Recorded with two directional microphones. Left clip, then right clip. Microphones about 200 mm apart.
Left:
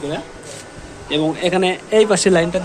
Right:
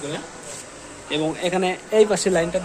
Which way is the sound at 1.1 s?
Centre (ahead or behind).